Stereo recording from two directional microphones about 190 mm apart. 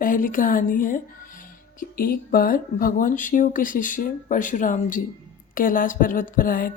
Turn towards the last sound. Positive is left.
turn(degrees=45)  # may be behind; listen again after turning